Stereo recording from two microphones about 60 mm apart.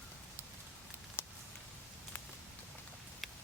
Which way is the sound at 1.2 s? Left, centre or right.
Left.